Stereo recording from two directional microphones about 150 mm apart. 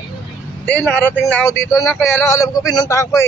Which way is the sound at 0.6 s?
10° left (ahead or behind).